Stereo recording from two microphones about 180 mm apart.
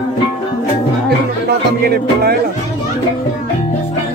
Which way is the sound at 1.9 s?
60° right (ahead or behind).